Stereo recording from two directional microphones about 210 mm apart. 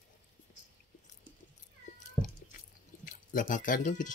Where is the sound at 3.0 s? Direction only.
40° left (ahead or behind).